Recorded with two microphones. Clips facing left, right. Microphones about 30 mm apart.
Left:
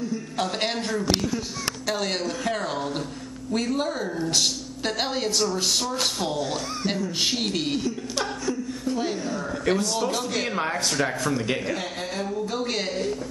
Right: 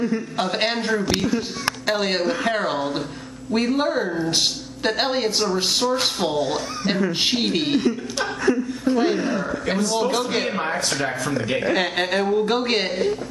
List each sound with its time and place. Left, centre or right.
0.4 s a woman's voice: right
8.8 s a woman's voice: right
9.7 s a woman's voice: right
11.7 s a woman's voice: right
12.2 s speech: right